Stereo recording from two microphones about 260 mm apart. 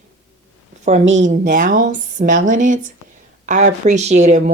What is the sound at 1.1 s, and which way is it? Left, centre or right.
Speech, right.